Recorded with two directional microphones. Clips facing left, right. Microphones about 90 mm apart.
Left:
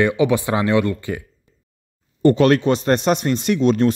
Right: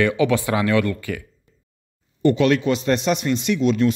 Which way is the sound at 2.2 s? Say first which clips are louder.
Left 3 dB; 40° left (ahead or behind).